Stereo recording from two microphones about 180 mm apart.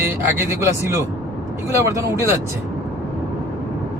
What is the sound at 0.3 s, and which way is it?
Speech, 15° right (ahead or behind).